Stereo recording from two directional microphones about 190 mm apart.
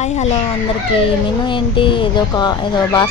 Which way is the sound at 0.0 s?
35° left (ahead or behind).